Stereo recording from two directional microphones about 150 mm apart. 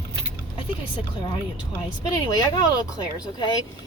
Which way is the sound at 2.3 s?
25° left (ahead or behind).